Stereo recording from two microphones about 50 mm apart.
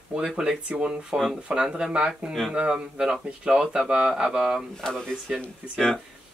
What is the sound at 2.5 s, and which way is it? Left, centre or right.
Speech, centre.